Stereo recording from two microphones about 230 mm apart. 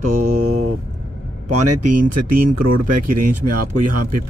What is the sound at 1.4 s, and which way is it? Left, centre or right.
Speech, right.